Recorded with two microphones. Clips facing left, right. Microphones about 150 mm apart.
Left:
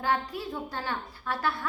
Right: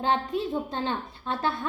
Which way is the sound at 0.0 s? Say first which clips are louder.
Right 4 dB; 25° right (ahead or behind).